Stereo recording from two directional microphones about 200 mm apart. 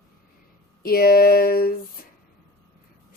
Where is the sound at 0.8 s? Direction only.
50° left (ahead or behind).